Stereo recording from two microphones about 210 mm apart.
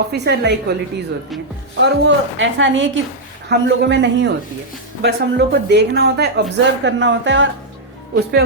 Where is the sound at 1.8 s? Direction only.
60° right (ahead or behind).